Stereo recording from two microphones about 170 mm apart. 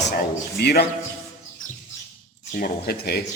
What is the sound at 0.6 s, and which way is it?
Speech, 70° left (ahead or behind).